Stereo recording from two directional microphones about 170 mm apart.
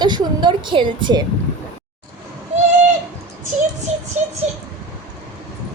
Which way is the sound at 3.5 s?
45° right (ahead or behind).